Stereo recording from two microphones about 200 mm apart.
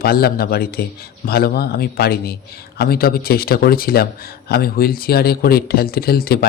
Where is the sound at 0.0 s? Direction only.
50° left (ahead or behind).